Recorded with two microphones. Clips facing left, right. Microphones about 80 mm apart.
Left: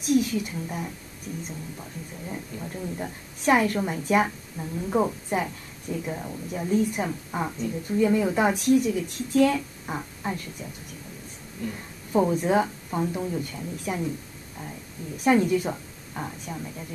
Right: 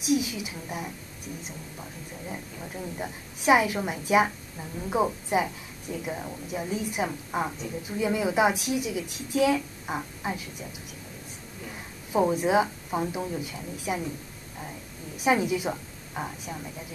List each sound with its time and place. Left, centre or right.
0.0 s a woman's voice: centre
2.2 s a woman's voice: centre
11.6 s a woman's voice: centre
15.1 s a woman's voice: centre